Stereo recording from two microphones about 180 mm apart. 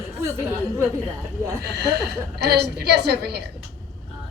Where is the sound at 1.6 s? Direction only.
65° right (ahead or behind).